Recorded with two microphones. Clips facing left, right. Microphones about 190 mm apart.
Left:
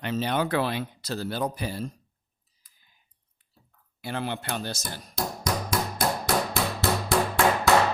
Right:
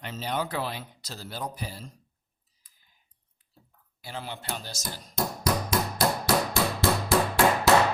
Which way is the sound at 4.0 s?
60° left (ahead or behind).